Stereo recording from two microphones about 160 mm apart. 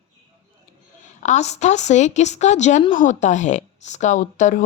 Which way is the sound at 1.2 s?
45° left (ahead or behind).